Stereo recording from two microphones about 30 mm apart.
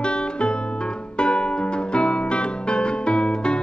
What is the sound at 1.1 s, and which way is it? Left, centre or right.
Music, left.